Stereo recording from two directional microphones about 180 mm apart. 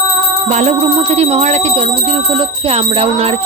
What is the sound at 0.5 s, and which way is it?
Speech, 35° right (ahead or behind).